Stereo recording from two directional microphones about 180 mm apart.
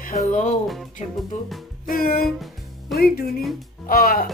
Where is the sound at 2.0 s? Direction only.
55° left (ahead or behind).